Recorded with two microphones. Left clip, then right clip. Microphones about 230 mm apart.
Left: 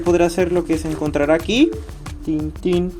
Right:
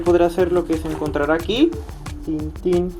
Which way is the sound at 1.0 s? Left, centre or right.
Left.